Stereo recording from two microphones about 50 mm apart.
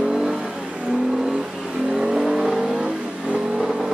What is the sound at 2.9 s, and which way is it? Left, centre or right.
Vehicle, right.